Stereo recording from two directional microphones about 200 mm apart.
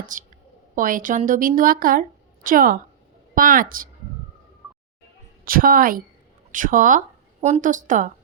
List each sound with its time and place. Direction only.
0.1 s a woman's voice: 40° right (ahead or behind)
5.5 s a woman's voice: 45° right (ahead or behind)